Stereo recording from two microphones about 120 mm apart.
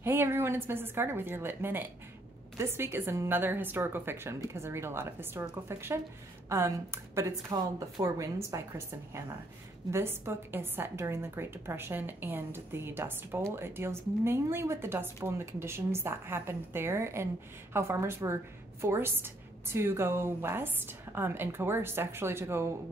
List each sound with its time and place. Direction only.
0.0 s a woman's voice: 20° right (ahead or behind)